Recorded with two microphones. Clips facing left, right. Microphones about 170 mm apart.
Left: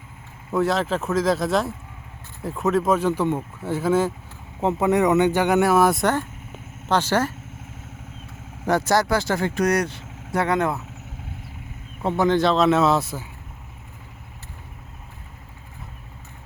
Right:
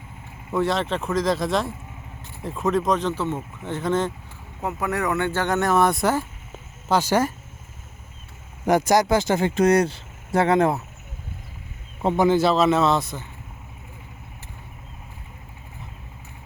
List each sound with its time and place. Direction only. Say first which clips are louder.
0.5 s speech: left 1 dB; centre (ahead or behind)
4.6 s speech: left 6 dB; 20° left (ahead or behind); by 7.3 s 10° right (ahead or behind)
8.6 s speech: right 2 dB; 15° right (ahead or behind)
12.0 s speech: right 1 dB; 15° right (ahead or behind); by 13.2 s 5° left (ahead or behind)